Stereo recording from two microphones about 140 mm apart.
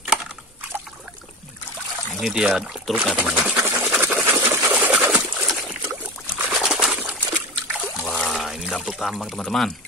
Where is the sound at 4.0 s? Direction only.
15° right (ahead or behind).